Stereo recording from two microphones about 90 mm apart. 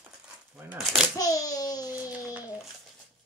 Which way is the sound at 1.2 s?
40° left (ahead or behind).